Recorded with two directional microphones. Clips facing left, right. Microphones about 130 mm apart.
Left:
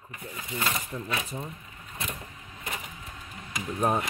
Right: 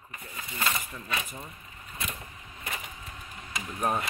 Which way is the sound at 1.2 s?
25° left (ahead or behind).